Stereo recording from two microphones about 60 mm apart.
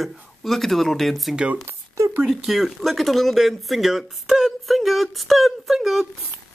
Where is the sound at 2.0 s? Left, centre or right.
Right.